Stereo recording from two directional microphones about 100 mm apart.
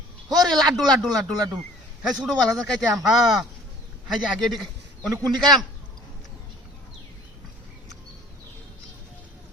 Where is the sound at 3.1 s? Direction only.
5° right (ahead or behind).